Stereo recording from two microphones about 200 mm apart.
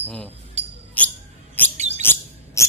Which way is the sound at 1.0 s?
5° left (ahead or behind).